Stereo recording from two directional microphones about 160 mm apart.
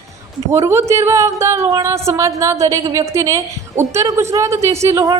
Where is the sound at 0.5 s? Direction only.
15° right (ahead or behind).